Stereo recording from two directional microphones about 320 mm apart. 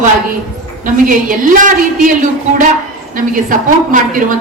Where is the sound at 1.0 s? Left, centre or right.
Right.